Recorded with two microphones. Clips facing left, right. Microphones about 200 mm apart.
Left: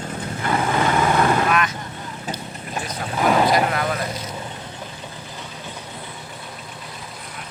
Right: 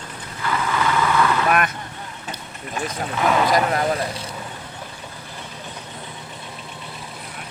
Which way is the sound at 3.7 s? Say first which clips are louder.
Right 2 dB; 30° right (ahead or behind).